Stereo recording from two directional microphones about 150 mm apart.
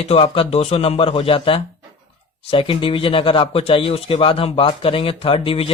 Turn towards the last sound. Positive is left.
turn(degrees=40)  # may be behind; listen again after turning